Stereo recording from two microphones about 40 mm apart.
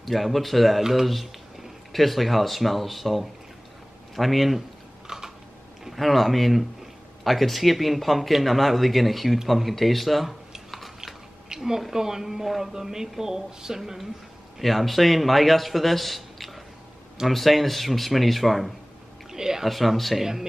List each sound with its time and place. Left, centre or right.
0.0 s speech: centre
1.0 s a sound: centre
1.9 s speech: centre
5.0 s typing: centre
5.9 s speech: centre
11.4 s a sound: centre
11.8 s speech: centre
14.6 s speech: centre
19.3 s a sound: centre
19.6 s speech: centre